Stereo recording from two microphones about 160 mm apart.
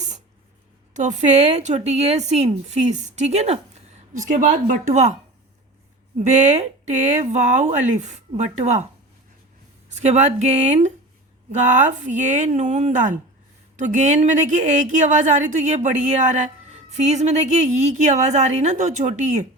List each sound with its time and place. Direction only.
0.9 s a woman's voice: 50° right (ahead or behind)
4.3 s speech: 60° right (ahead or behind)
6.1 s a woman's voice: 45° right (ahead or behind)
9.9 s a woman's voice: 45° right (ahead or behind)
16.9 s a woman's voice: 45° right (ahead or behind)